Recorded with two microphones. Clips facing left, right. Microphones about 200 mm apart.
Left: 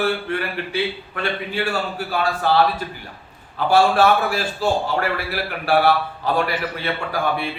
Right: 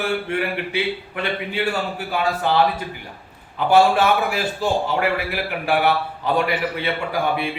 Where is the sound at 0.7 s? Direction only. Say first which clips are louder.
Even; 20° right (ahead or behind).